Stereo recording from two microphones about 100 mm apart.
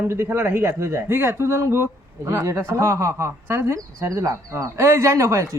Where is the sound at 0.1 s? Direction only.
25° right (ahead or behind).